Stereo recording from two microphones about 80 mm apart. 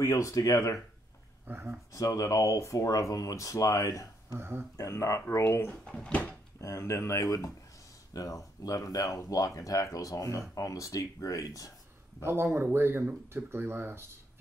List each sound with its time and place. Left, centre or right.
0.0 s speech: left
1.5 s speech: right
1.9 s speech: left
4.4 s speech: right
4.7 s speech: left
5.9 s speech: centre
6.6 s speech: left
12.2 s speech: right